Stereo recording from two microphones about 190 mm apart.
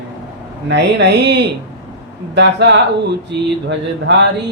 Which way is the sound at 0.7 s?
65° right (ahead or behind).